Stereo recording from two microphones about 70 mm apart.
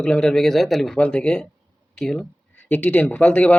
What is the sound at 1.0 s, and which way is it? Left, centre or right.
Speech, centre.